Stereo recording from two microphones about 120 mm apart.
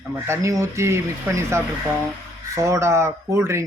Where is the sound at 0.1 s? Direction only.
25° right (ahead or behind).